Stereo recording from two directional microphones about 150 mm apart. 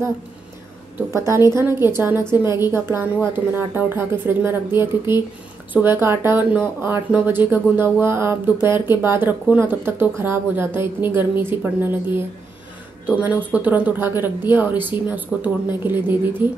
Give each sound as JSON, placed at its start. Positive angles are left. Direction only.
{"t": 0.9, "sound": "speech", "side_deg": -15}